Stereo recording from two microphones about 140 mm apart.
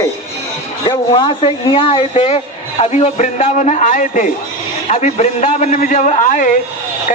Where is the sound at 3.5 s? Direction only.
60° left (ahead or behind).